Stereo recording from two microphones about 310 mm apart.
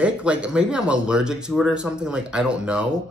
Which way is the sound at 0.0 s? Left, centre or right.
Centre.